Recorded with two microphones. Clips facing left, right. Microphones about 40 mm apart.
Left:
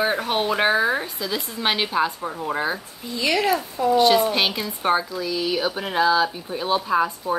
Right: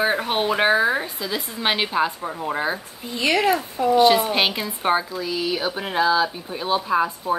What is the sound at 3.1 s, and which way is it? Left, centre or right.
Speech, right.